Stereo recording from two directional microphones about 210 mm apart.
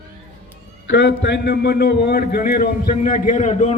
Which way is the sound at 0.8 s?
60° left (ahead or behind).